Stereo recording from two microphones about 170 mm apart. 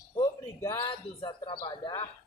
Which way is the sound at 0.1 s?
20° left (ahead or behind).